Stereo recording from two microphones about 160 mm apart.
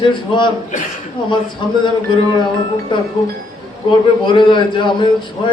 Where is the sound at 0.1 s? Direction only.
30° left (ahead or behind).